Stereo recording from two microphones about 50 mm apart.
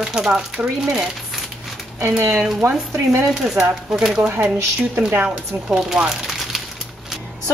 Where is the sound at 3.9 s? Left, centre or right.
Centre.